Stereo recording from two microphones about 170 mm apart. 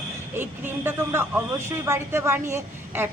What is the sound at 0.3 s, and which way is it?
Speech, 15° right (ahead or behind).